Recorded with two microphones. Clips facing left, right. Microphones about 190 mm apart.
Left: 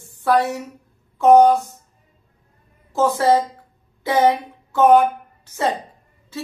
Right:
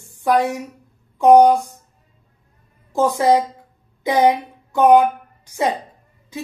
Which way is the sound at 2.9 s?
15° right (ahead or behind).